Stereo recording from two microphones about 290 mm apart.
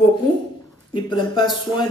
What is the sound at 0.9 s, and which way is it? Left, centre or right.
Speech, centre.